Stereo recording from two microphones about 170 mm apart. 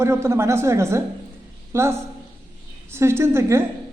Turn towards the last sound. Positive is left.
turn(degrees=-15)  # may be behind; listen again after turning